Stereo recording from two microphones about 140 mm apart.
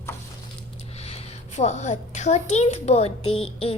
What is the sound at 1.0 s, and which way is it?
A woman's voice, 50° left (ahead or behind).